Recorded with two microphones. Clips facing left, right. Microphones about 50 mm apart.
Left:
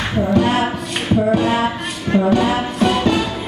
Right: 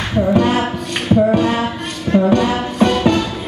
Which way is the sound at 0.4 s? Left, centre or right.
Centre.